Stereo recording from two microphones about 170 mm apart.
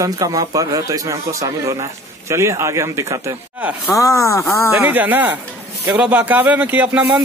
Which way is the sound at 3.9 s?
20° left (ahead or behind).